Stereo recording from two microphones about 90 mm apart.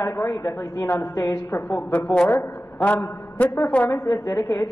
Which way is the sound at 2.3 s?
20° left (ahead or behind).